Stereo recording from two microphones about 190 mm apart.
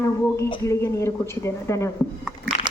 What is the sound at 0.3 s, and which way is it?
A woman's voice, 15° left (ahead or behind).